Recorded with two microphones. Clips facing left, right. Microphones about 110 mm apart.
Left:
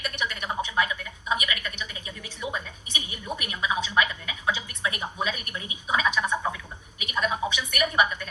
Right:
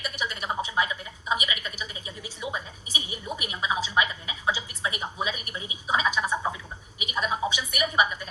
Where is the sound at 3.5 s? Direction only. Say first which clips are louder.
Even; 30° right (ahead or behind).